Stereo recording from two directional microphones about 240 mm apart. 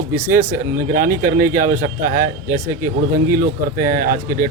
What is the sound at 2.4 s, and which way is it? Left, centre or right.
Speech, centre.